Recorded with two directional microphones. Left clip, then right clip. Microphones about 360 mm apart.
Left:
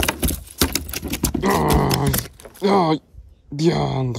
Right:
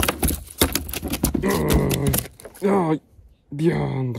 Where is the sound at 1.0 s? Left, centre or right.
Centre.